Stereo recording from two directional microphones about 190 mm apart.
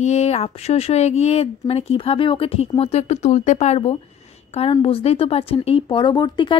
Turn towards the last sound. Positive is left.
turn(degrees=25)  # may be behind; listen again after turning